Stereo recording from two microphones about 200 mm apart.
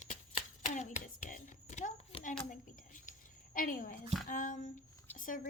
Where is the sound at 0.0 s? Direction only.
35° left (ahead or behind).